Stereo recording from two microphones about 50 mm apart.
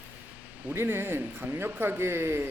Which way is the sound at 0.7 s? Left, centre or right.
Right.